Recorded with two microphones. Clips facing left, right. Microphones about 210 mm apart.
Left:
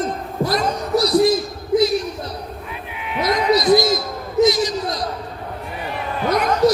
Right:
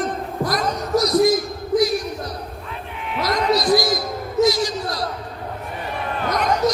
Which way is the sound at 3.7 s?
25° left (ahead or behind).